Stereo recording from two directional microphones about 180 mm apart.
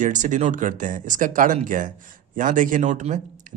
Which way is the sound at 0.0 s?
45° right (ahead or behind).